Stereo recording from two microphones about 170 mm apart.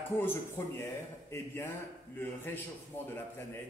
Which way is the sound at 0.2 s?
15° left (ahead or behind).